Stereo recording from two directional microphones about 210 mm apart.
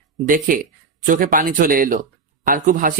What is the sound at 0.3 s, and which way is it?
Speech, 40° right (ahead or behind).